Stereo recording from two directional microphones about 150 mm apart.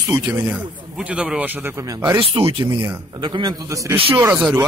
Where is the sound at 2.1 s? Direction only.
40° right (ahead or behind).